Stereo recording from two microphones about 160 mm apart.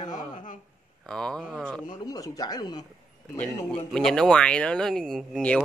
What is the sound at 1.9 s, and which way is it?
Speech, 25° left (ahead or behind).